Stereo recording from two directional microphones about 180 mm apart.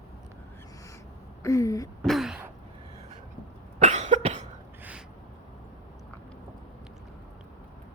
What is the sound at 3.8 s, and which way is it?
Cough, 40° right (ahead or behind).